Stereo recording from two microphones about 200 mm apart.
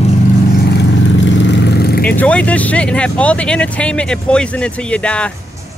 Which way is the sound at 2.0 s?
5° left (ahead or behind).